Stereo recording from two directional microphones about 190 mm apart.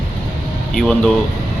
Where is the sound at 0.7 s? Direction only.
Centre (ahead or behind).